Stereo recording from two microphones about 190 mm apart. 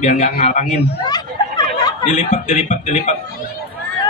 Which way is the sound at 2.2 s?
40° left (ahead or behind).